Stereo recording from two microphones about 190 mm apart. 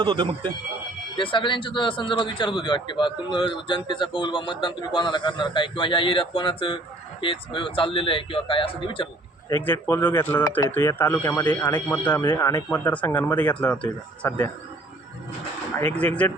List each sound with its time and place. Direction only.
0.0 s speech: 25° right (ahead or behind)
1.1 s a man's voice: 25° left (ahead or behind)
9.5 s speech: 10° left (ahead or behind)
12.2 s a man's voice: 25° left (ahead or behind)
12.5 s speech: 10° left (ahead or behind)
16.0 s speech: 5° left (ahead or behind)